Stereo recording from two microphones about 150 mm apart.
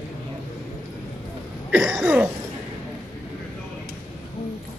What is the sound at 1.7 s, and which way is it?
Cough, 5° right (ahead or behind).